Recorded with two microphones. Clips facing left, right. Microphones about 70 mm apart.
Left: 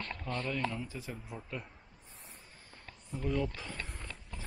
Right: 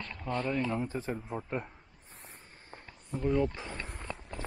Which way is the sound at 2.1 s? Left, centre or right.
Right.